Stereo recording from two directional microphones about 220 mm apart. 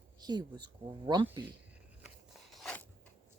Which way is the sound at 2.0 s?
Centre (ahead or behind).